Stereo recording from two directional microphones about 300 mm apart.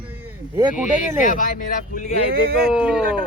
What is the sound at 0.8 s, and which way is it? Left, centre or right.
Speech, left.